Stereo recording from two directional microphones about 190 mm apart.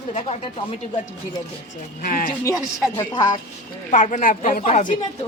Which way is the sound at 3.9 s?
40° left (ahead or behind).